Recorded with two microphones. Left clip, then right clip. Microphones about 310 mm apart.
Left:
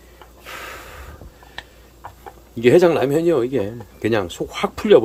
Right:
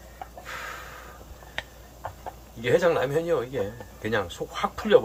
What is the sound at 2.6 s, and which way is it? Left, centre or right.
Speech, left.